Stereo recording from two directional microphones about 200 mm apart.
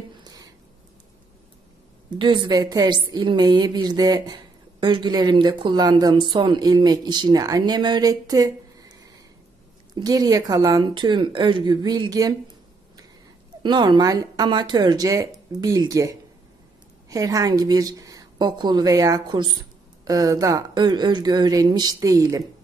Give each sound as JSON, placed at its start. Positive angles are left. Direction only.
{"t": 0.2, "sound": "a sound", "side_deg": -20}
{"t": 2.0, "sound": "a woman's voice", "side_deg": -25}
{"t": 13.6, "sound": "a woman's voice", "side_deg": -20}